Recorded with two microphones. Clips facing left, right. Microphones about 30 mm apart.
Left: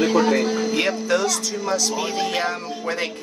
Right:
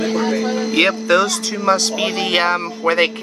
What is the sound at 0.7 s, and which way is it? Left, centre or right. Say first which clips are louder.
Speech: right 10 dB; right.